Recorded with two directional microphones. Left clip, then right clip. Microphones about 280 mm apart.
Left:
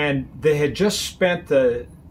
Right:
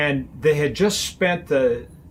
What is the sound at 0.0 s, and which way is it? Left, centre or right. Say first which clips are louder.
Speech: even; centre.